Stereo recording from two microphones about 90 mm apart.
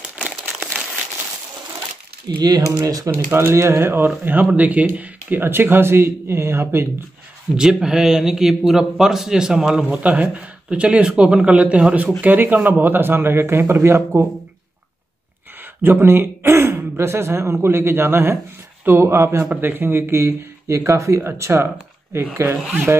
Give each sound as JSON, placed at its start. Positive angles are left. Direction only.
{"t": 0.1, "sound": "crumpling", "side_deg": -10}
{"t": 2.2, "sound": "speech", "side_deg": -50}
{"t": 3.1, "sound": "speech", "side_deg": -25}
{"t": 7.5, "sound": "speech", "side_deg": -5}
{"t": 15.6, "sound": "speech", "side_deg": -25}